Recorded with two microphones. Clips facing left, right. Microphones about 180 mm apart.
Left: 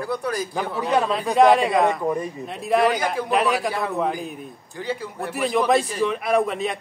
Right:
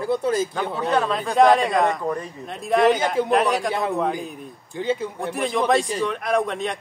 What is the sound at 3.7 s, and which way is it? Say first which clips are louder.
A man's voice: right 1 dB; 20° right (ahead or behind).